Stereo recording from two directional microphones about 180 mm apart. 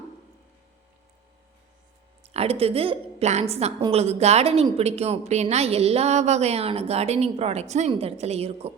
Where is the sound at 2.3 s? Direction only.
35° right (ahead or behind).